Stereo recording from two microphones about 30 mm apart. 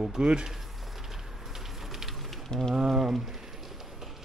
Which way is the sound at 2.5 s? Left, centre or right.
Left.